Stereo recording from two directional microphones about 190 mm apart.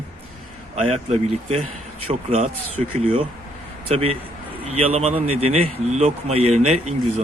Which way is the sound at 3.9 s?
30° right (ahead or behind).